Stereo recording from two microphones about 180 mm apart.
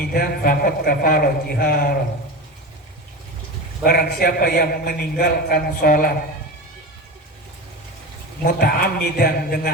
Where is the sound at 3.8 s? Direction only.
55° left (ahead or behind).